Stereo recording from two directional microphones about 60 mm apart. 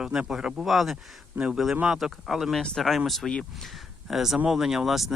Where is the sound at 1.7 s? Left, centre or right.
Centre.